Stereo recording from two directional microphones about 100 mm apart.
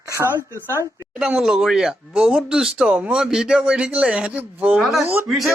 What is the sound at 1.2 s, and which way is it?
Speech, 5° right (ahead or behind).